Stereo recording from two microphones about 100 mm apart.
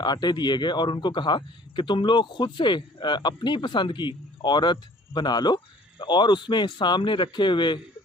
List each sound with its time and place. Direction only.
0.0 s a man's voice: 45° left (ahead or behind)